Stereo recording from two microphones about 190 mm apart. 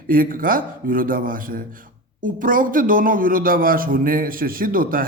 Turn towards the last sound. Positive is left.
turn(degrees=-50)  # may be behind; listen again after turning